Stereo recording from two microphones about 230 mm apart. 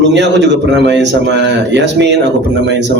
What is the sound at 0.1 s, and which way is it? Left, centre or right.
A man's voice, right.